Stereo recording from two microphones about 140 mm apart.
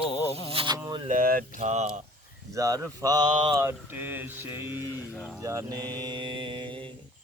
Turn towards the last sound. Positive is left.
turn(degrees=-35)  # may be behind; listen again after turning